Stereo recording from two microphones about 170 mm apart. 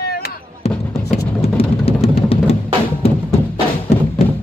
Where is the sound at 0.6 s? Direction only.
35° left (ahead or behind).